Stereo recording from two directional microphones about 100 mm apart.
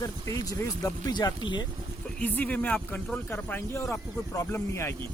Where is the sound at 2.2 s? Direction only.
15° left (ahead or behind).